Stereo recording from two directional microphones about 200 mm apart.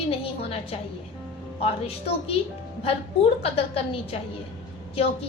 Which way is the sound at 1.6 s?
30° left (ahead or behind).